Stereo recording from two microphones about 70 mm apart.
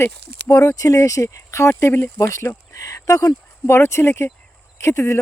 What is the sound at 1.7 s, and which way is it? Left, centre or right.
Speech, left.